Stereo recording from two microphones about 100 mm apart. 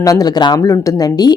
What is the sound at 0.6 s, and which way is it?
Speech, 35° left (ahead or behind).